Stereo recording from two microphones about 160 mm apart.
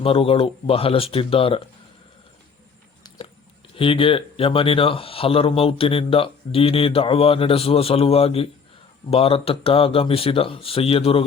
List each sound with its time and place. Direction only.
0.0 s speech: 35° left (ahead or behind)
3.8 s speech: 35° left (ahead or behind)